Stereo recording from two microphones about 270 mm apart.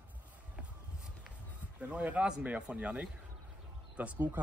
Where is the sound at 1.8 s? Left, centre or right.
Centre.